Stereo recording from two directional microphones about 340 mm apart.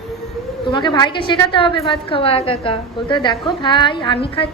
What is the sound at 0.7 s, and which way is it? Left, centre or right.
A woman's voice, centre.